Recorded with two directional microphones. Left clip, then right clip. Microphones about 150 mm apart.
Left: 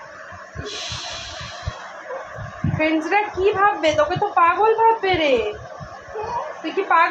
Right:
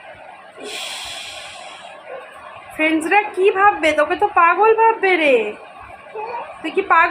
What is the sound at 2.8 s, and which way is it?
A woman's voice, 75° right (ahead or behind).